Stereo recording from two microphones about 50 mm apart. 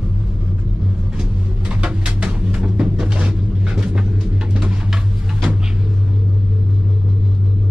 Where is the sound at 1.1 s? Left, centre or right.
Centre.